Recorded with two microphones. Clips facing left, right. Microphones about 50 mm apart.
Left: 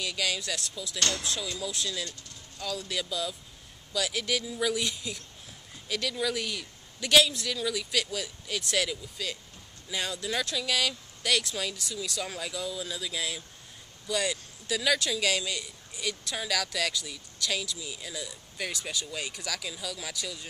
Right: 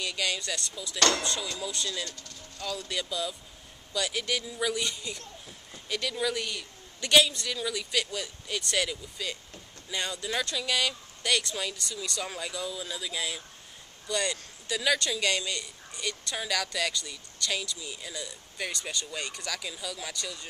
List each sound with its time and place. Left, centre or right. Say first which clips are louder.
0.0 s speech: even; centre
0.9 s speech: right 5 dB; right
1.2 s speech: right 1 dB; centre